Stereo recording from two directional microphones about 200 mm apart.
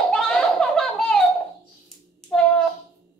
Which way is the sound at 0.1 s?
5° left (ahead or behind).